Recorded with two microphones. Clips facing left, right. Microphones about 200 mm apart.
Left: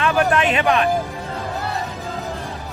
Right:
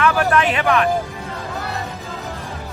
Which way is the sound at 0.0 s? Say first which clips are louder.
Right 1 dB; 20° left (ahead or behind).